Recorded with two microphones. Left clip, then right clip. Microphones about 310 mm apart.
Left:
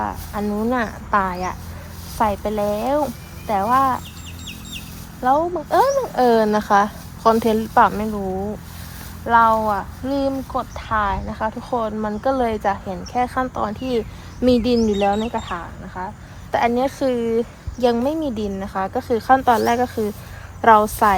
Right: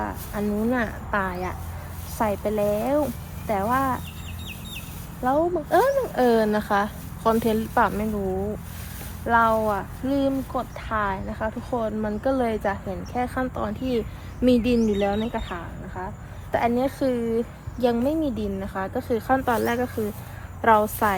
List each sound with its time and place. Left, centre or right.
0.0 s speech: centre
5.2 s speech: centre
9.2 s speech: centre